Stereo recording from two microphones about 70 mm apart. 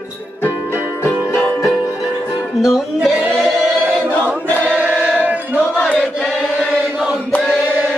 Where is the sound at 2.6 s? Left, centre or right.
Centre.